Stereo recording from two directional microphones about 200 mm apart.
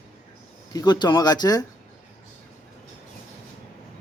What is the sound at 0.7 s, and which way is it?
Speech, 20° left (ahead or behind).